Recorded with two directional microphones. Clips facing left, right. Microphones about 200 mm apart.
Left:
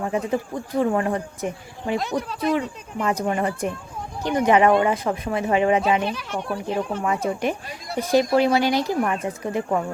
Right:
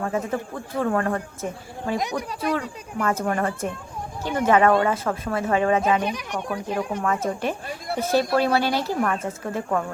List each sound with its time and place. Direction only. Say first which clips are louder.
0.0 s speech: left 2 dB; 15° left (ahead or behind)
2.0 s speech: left 2 dB; 15° right (ahead or behind)
2.6 s speech: left 2 dB; 15° left (ahead or behind)
6.0 s speech: left 1 dB; 15° right (ahead or behind)
7.0 s speech: left 1 dB; 15° left (ahead or behind)